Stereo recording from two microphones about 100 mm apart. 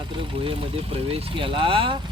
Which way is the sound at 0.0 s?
55° right (ahead or behind).